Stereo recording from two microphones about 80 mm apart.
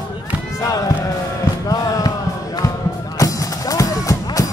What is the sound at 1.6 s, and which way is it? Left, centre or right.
Music, left.